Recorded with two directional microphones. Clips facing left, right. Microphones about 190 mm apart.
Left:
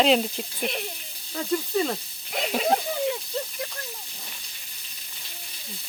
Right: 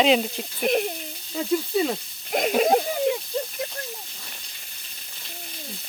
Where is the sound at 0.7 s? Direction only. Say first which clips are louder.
Right 12 dB; 45° right (ahead or behind).